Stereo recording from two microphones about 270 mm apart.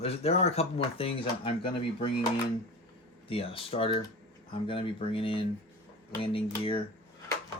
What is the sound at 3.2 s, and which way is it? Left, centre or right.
Speech, centre.